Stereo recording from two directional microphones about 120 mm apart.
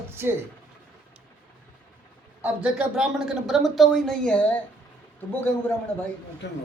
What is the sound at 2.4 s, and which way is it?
Speech, 10° right (ahead or behind).